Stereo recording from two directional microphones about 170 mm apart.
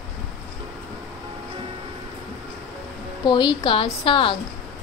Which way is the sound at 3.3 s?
25° left (ahead or behind).